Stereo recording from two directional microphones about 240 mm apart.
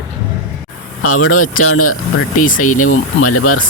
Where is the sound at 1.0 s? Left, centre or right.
Left.